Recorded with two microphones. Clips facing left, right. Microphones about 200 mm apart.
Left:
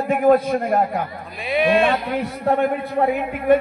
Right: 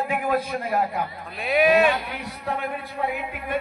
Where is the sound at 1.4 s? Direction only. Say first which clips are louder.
Left 1 dB; 5° right (ahead or behind).